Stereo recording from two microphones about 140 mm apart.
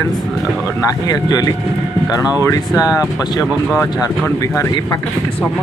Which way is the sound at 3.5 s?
5° right (ahead or behind).